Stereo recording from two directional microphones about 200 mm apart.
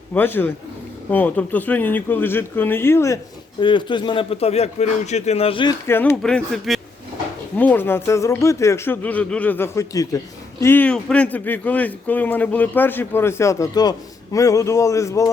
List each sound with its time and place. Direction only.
0.1 s speech: 10° left (ahead or behind); by 5.7 s 25° left (ahead or behind)
5.9 s speech: 10° left (ahead or behind)